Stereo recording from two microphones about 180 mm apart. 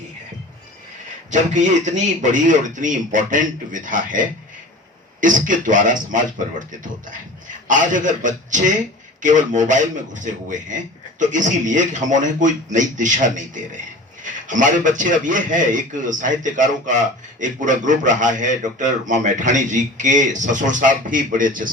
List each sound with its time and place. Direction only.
2.3 s a man's voice: 45° right (ahead or behind)
5.2 s a man's voice: 45° right (ahead or behind)